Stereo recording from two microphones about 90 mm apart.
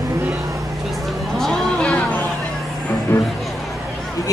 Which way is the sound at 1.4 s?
5° left (ahead or behind).